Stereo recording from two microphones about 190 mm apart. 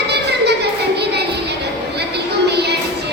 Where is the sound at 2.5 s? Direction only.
60° right (ahead or behind).